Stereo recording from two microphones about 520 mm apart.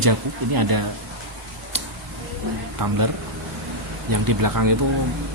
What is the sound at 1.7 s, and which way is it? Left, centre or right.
Tick, right.